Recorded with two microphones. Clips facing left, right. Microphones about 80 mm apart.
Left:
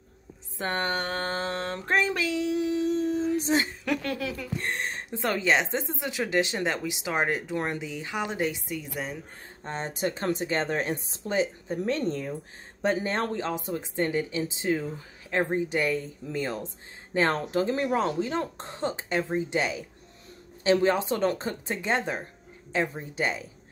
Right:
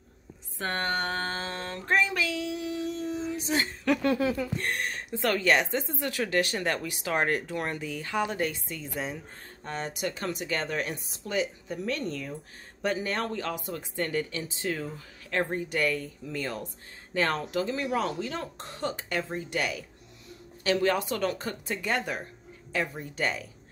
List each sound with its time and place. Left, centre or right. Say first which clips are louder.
0.6 s speech: left 1 dB; left
1.7 s a sound: right 1 dB; left
4.0 s speech: right 6 dB; right
4.6 s speech: even; left
9.6 s speech: left 3 dB; left